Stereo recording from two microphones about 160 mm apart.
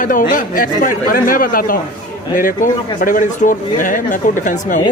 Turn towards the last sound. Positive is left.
turn(degrees=55)  # may be behind; listen again after turning